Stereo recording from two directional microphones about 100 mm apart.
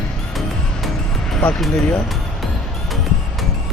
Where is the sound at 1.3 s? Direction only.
10° left (ahead or behind).